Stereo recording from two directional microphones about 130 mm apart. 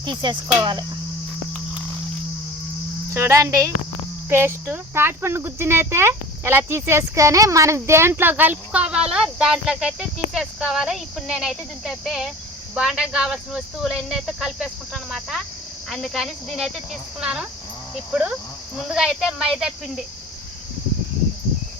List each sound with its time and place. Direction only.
0.0 s speech: 35° right (ahead or behind)
3.1 s speech: 20° right (ahead or behind); by 20.1 s 5° right (ahead or behind)